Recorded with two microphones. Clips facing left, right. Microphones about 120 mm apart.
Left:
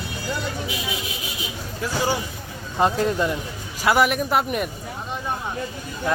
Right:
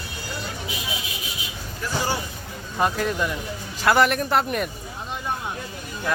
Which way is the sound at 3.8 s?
5° left (ahead or behind).